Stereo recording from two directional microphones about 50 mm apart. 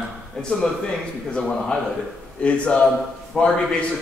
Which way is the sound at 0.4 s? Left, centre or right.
Centre.